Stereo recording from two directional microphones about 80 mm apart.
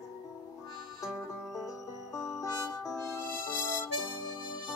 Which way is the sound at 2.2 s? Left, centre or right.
Left.